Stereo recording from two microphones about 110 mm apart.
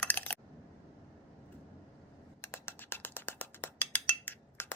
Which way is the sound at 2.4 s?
20° left (ahead or behind).